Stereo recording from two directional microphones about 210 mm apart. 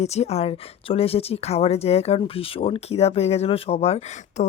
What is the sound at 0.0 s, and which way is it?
Speech, 30° left (ahead or behind).